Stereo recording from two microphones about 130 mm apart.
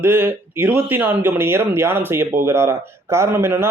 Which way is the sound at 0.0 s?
15° right (ahead or behind).